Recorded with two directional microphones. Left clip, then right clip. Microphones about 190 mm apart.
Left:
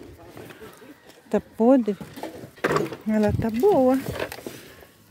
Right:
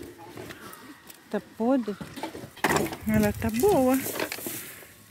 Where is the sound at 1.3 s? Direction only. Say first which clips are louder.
Left 7 dB; 55° left (ahead or behind).